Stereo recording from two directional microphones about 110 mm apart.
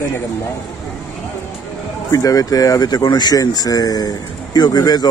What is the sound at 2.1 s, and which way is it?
Speech, 35° left (ahead or behind).